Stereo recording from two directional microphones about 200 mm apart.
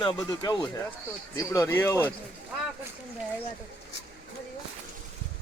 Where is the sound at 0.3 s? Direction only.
20° left (ahead or behind).